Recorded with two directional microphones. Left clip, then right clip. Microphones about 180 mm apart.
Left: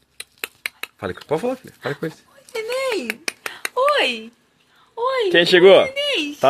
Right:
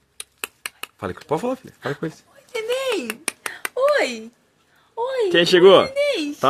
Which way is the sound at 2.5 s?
20° right (ahead or behind).